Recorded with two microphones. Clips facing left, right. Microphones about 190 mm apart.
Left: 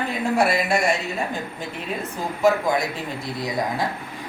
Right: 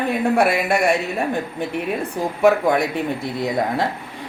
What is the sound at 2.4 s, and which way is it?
A woman's voice, 60° right (ahead or behind).